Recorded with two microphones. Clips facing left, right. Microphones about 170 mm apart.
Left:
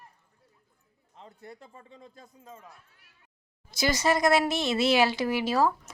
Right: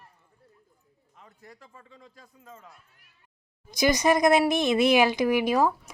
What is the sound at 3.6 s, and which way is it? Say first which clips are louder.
Speech: right 4 dB; 15° right (ahead or behind).